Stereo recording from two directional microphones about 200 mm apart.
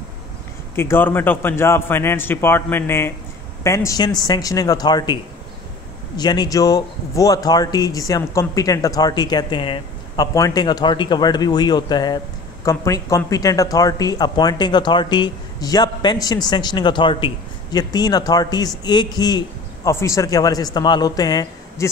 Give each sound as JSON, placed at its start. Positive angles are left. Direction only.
{"t": 0.7, "sound": "a man's voice", "side_deg": 10}